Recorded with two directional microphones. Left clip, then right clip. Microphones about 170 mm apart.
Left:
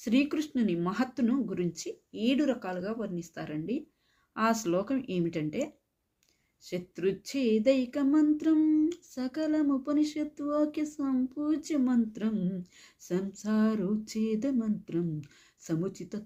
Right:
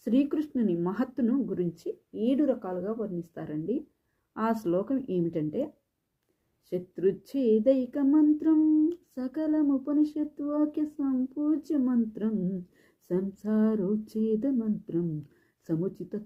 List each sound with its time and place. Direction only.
0.0 s speech: 20° left (ahead or behind)
10.4 s speech: 45° left (ahead or behind)
10.7 s speech: 20° left (ahead or behind)
12.1 s a sound: 20° left (ahead or behind)
14.8 s speech: 20° left (ahead or behind)